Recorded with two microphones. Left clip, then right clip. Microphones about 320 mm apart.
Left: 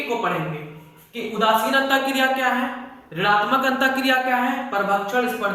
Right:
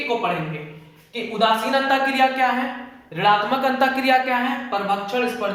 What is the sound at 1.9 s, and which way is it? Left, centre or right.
Speech, centre.